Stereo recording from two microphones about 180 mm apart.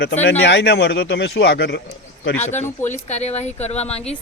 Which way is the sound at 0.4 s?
70° left (ahead or behind).